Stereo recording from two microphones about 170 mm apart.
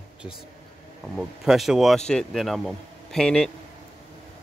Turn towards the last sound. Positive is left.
turn(degrees=5)  # may be behind; listen again after turning